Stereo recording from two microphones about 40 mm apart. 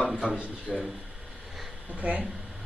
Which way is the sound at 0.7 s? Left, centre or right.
Centre.